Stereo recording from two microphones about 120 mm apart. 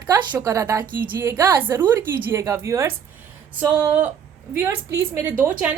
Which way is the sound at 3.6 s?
15° right (ahead or behind).